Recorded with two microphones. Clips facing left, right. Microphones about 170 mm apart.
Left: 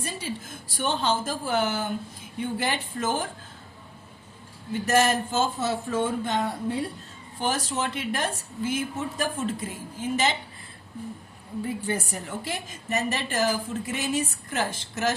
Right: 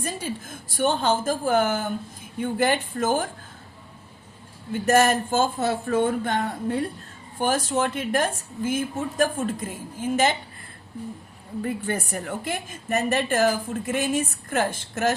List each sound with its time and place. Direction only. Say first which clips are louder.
0.0 s a woman's voice: right 3 dB; 50° right (ahead or behind)
4.9 s a woman's voice: right 4 dB; 50° right (ahead or behind)
11.6 s a woman's voice: right 2 dB; 55° right (ahead or behind)